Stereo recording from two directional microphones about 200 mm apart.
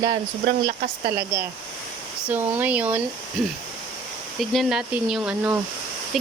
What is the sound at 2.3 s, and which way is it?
Speech, 10° right (ahead or behind).